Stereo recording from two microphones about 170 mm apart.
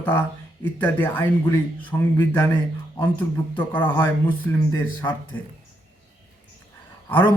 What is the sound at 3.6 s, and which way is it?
Speech, 10° left (ahead or behind).